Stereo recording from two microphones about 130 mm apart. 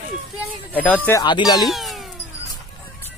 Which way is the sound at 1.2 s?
35° left (ahead or behind).